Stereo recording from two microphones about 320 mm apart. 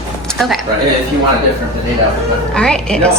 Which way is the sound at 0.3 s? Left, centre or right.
Centre.